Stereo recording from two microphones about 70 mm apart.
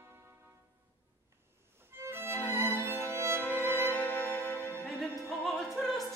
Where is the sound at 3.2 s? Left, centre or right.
Right.